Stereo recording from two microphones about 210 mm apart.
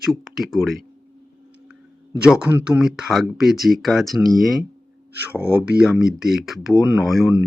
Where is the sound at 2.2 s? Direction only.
5° right (ahead or behind).